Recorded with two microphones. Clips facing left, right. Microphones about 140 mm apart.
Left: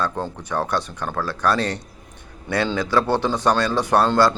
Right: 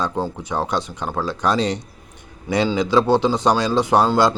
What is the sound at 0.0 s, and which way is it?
Speech, 15° right (ahead or behind).